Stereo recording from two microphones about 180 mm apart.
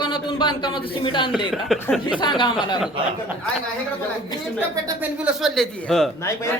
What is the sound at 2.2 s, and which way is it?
Speech, 25° left (ahead or behind).